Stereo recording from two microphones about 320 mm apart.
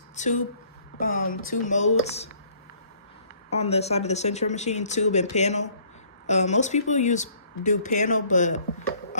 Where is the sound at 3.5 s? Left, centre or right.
Centre.